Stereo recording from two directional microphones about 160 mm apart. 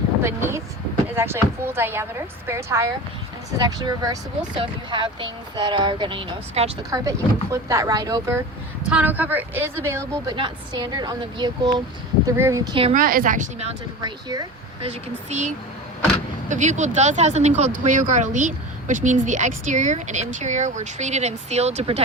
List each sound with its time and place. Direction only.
0.2 s a woman's voice: 15° right (ahead or behind); by 6.7 s 35° right (ahead or behind)
6.9 s speech: 20° right (ahead or behind)
8.9 s a woman's voice: 10° right (ahead or behind)
10.3 s speech: 30° right (ahead or behind)
12.9 s a woman's voice: 60° right (ahead or behind)
14.0 s speech: 25° right (ahead or behind)
14.8 s a woman's voice: 45° right (ahead or behind)